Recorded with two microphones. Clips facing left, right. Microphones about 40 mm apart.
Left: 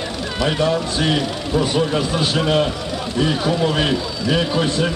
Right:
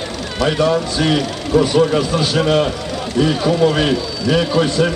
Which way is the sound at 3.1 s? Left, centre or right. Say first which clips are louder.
Right 4 dB; centre.